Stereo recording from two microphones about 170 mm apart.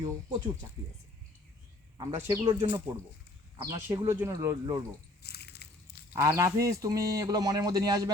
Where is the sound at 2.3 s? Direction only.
20° right (ahead or behind).